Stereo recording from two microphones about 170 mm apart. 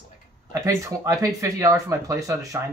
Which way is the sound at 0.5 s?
20° right (ahead or behind).